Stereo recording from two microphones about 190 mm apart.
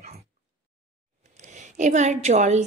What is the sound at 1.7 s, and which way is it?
Speech, 40° right (ahead or behind).